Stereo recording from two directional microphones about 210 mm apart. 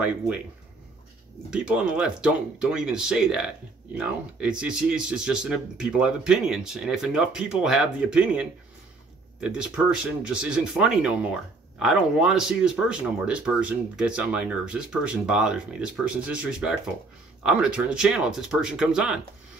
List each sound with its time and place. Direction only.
1.5 s speech: 5° right (ahead or behind)